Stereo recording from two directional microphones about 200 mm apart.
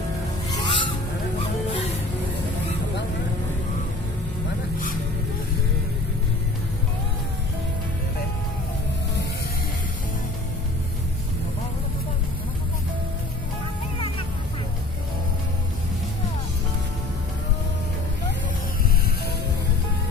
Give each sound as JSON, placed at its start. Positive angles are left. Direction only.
{"t": 0.5, "sound": "music", "side_deg": 25}